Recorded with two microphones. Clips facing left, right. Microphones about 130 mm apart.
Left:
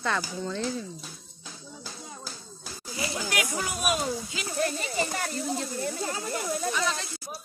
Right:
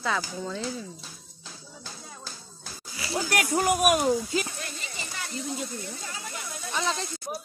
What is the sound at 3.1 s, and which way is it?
Speech, 45° right (ahead or behind).